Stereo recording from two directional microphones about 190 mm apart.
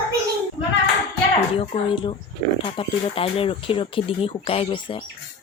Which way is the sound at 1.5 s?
30° left (ahead or behind).